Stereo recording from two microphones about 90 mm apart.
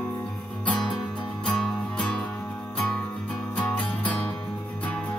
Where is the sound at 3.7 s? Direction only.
15° left (ahead or behind).